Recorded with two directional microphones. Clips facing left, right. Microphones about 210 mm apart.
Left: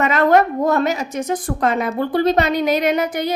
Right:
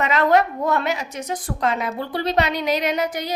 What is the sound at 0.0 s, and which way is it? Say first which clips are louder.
A woman's voice: left 3 dB; 50° left (ahead or behind).